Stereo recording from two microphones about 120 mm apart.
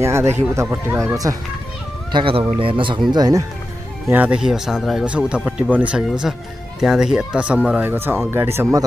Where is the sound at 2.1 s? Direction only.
50° right (ahead or behind).